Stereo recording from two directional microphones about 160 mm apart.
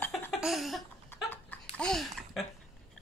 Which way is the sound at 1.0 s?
15° left (ahead or behind).